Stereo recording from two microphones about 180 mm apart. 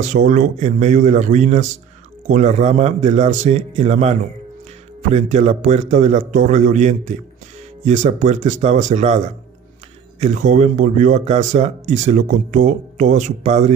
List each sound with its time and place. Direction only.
0.0 s a man's voice: 45° right (ahead or behind)
10.2 s speech: 45° right (ahead or behind)